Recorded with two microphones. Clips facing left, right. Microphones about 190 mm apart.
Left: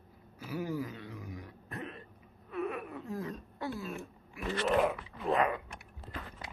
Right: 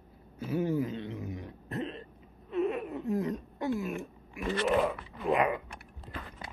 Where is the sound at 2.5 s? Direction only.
25° right (ahead or behind).